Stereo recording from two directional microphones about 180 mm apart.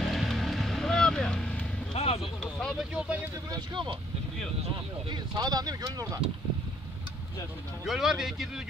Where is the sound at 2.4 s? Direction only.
5° left (ahead or behind).